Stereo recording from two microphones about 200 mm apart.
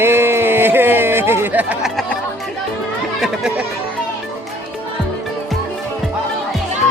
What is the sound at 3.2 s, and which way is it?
Speech, 5° right (ahead or behind).